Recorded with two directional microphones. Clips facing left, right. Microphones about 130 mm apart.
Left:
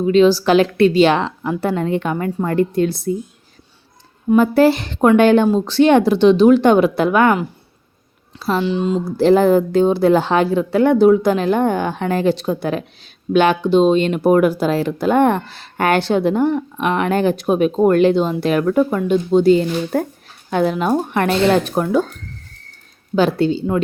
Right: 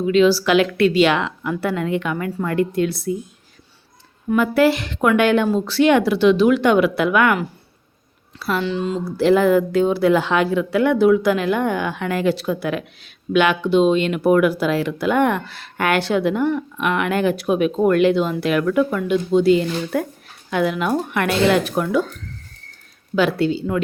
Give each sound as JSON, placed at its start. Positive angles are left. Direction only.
{"t": 0.0, "sound": "speech", "side_deg": 35}
{"t": 4.3, "sound": "speech", "side_deg": 30}
{"t": 23.1, "sound": "speech", "side_deg": 30}